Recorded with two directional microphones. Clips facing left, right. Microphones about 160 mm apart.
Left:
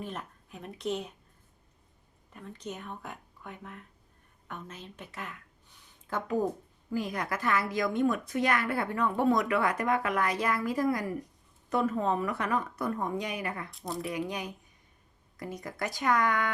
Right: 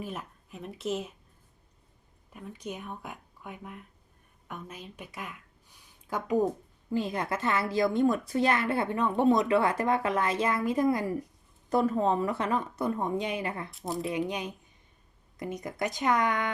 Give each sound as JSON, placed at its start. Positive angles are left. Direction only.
{"t": 0.0, "sound": "speech", "side_deg": -5}
{"t": 2.3, "sound": "speech", "side_deg": -10}
{"t": 6.9, "sound": "a woman's voice", "side_deg": -25}
{"t": 13.7, "sound": "speech", "side_deg": 0}
{"t": 14.0, "sound": "a woman's voice", "side_deg": -20}